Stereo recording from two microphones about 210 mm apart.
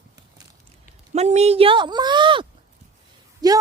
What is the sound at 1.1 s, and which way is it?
A woman's voice, 30° right (ahead or behind).